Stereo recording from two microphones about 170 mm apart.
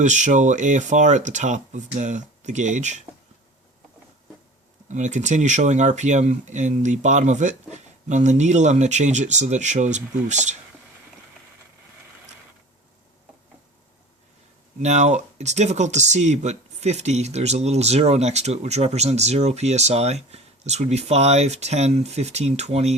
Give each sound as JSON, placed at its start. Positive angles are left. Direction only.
{"t": 0.0, "sound": "speech", "side_deg": -45}
{"t": 4.9, "sound": "speech", "side_deg": -45}
{"t": 14.8, "sound": "speech", "side_deg": -40}